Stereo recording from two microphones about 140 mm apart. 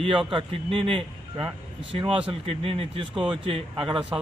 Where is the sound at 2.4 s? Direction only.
45° right (ahead or behind).